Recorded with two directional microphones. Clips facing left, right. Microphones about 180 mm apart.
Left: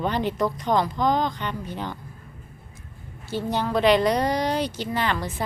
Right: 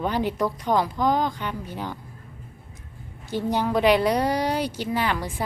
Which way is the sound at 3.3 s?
15° right (ahead or behind).